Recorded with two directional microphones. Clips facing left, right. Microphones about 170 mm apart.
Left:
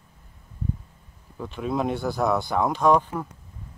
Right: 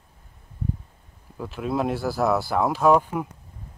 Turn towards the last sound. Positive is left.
turn(degrees=-10)  # may be behind; listen again after turning